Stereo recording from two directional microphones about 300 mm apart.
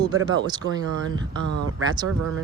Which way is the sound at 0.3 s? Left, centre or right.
Centre.